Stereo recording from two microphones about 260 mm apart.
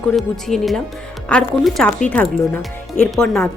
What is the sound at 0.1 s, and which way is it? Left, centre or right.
A woman's voice, centre.